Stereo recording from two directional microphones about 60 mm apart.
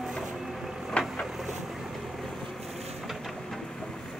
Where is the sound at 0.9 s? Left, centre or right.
Left.